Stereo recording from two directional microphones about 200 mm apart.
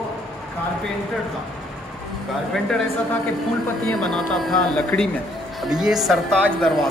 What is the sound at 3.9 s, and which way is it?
Speech, centre (ahead or behind).